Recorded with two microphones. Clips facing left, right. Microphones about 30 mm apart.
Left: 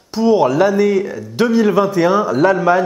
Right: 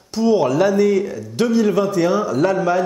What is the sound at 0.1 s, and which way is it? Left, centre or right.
Speech, centre.